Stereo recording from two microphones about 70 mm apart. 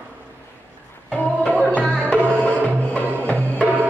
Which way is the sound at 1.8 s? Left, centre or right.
Centre.